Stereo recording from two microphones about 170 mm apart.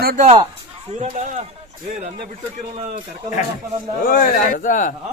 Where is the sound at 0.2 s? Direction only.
40° right (ahead or behind).